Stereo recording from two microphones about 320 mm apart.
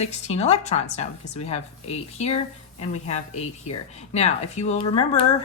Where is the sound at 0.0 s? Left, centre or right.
Centre.